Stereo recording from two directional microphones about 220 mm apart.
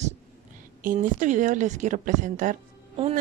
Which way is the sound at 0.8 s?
35° right (ahead or behind).